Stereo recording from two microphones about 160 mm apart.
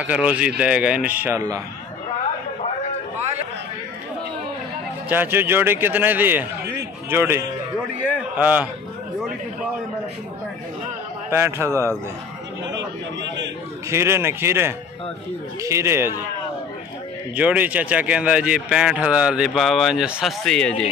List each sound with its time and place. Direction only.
0.0 s a man's voice: 10° right (ahead or behind)
5.1 s a man's voice: 15° right (ahead or behind)
11.2 s a man's voice: 15° right (ahead or behind)
11.7 s a man's voice: 15° left (ahead or behind)
13.8 s a man's voice: 15° right (ahead or behind)
17.4 s speech: 10° right (ahead or behind)